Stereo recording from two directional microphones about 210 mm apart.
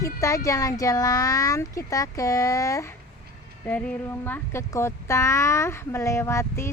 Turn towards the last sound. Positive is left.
turn(degrees=15)  # may be behind; listen again after turning